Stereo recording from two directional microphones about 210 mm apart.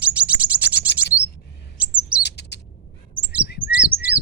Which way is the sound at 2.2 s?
55° left (ahead or behind).